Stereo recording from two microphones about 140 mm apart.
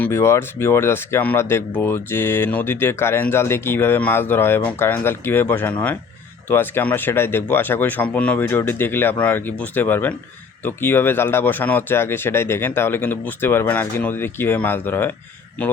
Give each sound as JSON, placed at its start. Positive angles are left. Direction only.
{"t": 0.0, "sound": "speech", "side_deg": 20}